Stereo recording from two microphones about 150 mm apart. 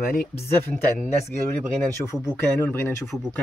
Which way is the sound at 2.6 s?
15° left (ahead or behind).